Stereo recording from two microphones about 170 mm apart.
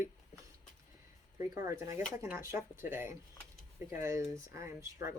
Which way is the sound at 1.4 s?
20° right (ahead or behind).